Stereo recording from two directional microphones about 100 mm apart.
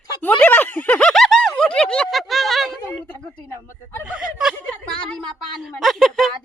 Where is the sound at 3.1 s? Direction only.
10° left (ahead or behind).